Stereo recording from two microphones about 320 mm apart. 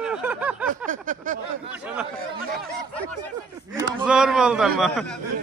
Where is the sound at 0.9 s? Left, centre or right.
Right.